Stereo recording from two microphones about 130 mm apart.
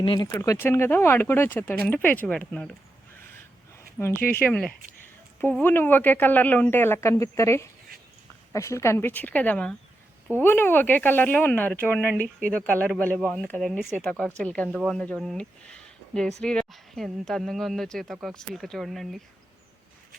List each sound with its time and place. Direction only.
0.2 s speech: 25° left (ahead or behind); by 2.7 s 10° left (ahead or behind)
4.0 s speech: 15° left (ahead or behind); by 19.2 s centre (ahead or behind)